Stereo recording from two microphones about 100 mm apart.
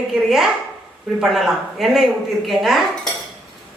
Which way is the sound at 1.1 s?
5° right (ahead or behind).